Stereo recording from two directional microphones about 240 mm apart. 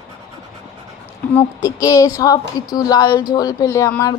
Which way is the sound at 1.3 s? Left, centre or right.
Centre.